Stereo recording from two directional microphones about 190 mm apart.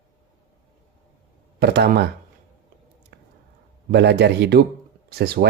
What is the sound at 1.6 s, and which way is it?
Speech, 60° right (ahead or behind).